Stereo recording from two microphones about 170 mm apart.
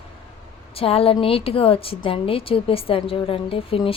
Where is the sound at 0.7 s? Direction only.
35° left (ahead or behind).